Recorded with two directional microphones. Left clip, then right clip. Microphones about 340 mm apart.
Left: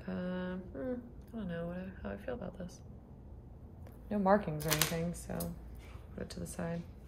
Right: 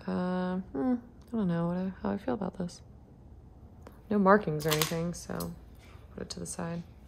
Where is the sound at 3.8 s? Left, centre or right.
Centre.